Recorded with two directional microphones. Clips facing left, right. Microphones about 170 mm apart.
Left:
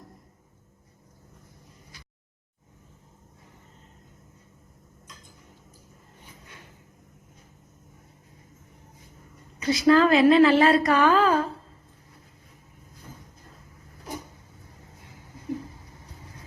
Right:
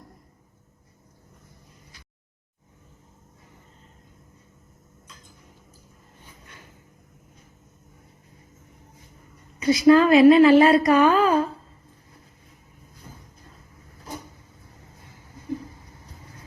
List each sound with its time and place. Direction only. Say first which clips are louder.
9.6 s a woman's voice: right 3 dB; 15° right (ahead or behind)